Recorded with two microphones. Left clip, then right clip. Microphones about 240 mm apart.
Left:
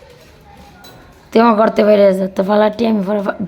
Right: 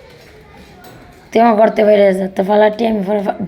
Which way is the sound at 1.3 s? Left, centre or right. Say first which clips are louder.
Right 1 dB; centre.